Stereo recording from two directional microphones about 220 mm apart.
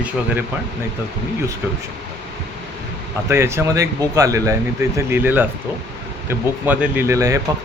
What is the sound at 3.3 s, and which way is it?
Speech, 10° right (ahead or behind).